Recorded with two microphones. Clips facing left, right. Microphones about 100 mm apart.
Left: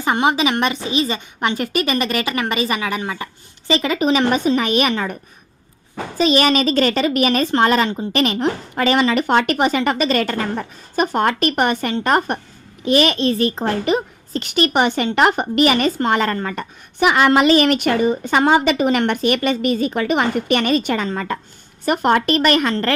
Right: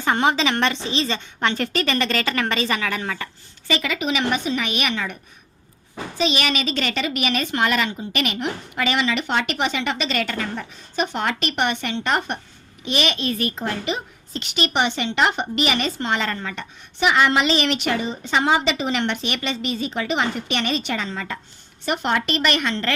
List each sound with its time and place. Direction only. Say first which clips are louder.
0.0 s a woman's voice: left 2 dB; 15° left (ahead or behind); by 5.1 s 35° left (ahead or behind)
6.1 s a woman's voice: left 7 dB; 40° left (ahead or behind)